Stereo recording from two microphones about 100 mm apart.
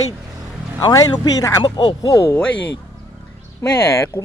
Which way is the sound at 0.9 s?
35° left (ahead or behind).